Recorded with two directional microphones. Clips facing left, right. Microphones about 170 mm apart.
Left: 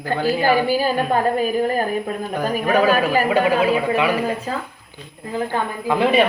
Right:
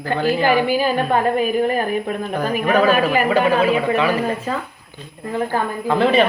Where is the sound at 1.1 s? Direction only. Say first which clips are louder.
Right 1 dB; 40° left (ahead or behind).